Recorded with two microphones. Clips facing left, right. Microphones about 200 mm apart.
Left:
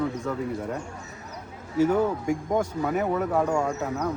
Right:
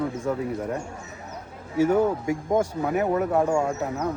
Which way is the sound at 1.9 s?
10° right (ahead or behind).